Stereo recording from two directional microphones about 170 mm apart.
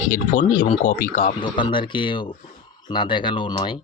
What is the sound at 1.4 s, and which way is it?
Speech, 30° left (ahead or behind).